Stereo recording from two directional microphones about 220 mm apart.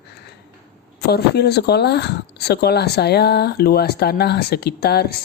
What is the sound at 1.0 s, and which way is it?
Speech, 50° left (ahead or behind).